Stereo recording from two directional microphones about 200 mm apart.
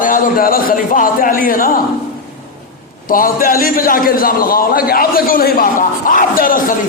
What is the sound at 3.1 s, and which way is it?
A man's voice, 45° left (ahead or behind).